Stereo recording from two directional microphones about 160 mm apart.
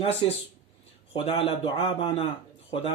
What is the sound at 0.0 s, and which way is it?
Speech, 40° left (ahead or behind).